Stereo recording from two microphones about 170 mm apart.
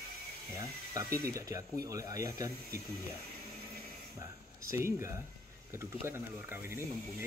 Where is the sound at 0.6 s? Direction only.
20° right (ahead or behind).